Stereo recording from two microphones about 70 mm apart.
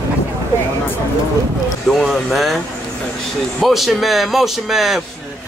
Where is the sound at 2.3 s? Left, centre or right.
Centre.